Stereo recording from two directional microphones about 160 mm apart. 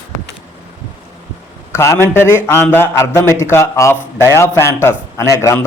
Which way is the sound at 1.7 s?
15° left (ahead or behind).